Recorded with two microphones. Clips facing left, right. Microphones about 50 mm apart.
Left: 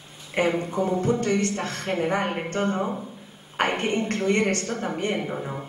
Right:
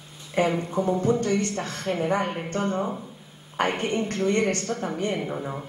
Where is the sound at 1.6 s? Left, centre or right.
Left.